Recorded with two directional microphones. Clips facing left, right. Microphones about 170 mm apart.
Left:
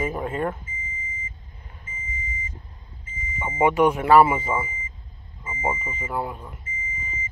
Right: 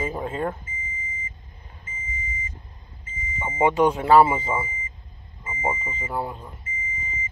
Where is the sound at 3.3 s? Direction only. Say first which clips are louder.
Left 1 dB; 20° right (ahead or behind).